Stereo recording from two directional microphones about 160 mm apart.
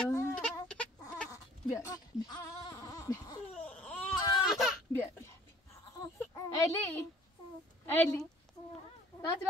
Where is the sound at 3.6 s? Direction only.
10° left (ahead or behind).